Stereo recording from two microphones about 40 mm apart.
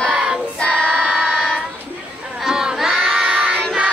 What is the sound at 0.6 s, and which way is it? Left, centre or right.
Child singing, left.